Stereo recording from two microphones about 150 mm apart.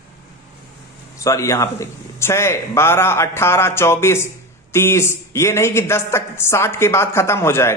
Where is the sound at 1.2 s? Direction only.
20° left (ahead or behind).